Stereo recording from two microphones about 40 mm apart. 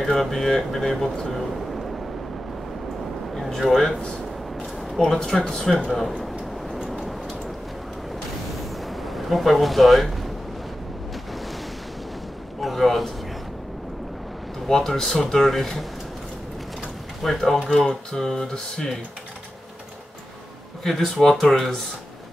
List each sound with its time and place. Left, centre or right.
0.0 s speech: centre
3.3 s a sound: centre
3.6 s speech: centre
5.0 s speech: centre
5.9 s speech: centre
6.9 s vehicle: centre
8.7 s a sound: centre
12.5 s a man's voice: centre
14.7 s speech: centre
17.2 s speech: centre
20.8 s speech: centre